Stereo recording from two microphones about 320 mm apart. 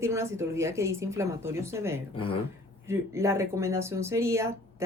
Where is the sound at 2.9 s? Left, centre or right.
Centre.